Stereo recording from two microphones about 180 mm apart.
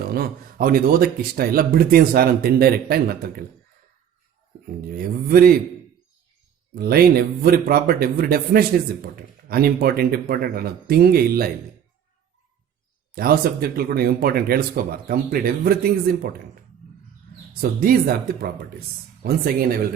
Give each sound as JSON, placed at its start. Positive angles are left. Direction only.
{"t": 0.1, "sound": "speech", "side_deg": -55}
{"t": 4.9, "sound": "speech", "side_deg": -55}
{"t": 6.7, "sound": "speech", "side_deg": -55}
{"t": 13.1, "sound": "speech", "side_deg": -60}
{"t": 17.6, "sound": "speech", "side_deg": -55}